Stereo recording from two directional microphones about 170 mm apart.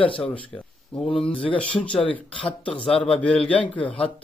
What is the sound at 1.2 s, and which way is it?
Speech, 30° left (ahead or behind).